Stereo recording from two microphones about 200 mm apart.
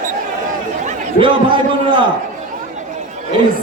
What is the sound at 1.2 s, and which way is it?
Speech, 25° right (ahead or behind).